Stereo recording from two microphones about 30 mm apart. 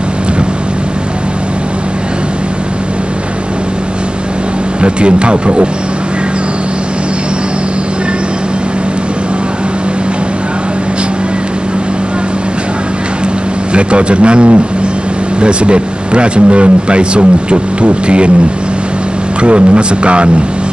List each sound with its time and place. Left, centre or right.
4.8 s speech: right
13.7 s speech: right
19.4 s speech: right